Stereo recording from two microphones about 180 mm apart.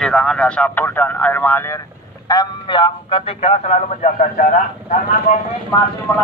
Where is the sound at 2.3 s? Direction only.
25° left (ahead or behind); by 4.4 s 45° left (ahead or behind).